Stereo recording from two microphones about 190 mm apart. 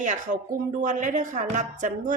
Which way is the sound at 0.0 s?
40° right (ahead or behind).